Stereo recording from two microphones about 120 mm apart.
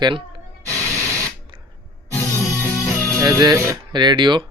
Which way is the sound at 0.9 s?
20° left (ahead or behind).